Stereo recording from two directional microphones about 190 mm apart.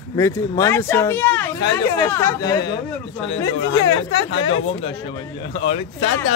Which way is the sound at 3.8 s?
25° left (ahead or behind).